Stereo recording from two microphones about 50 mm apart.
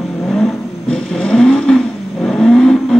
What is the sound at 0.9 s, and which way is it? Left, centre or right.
Vehicle, centre.